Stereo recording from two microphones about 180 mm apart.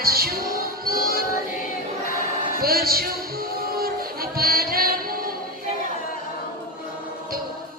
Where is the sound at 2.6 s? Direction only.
55° right (ahead or behind).